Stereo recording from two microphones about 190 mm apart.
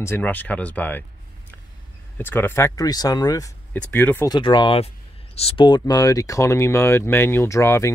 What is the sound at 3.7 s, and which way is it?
Speech, 10° left (ahead or behind).